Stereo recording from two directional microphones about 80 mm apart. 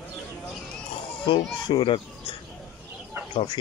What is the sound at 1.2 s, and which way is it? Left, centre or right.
Speech, left.